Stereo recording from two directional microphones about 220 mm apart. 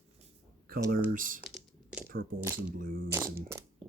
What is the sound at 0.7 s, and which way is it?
Speech, 40° right (ahead or behind).